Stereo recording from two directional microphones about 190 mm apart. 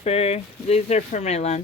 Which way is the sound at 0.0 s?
30° left (ahead or behind).